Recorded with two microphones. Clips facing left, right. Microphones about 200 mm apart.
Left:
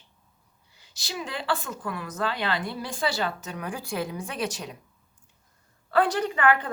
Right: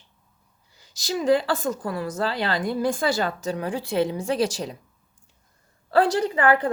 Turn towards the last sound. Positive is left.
turn(degrees=-30)  # may be behind; listen again after turning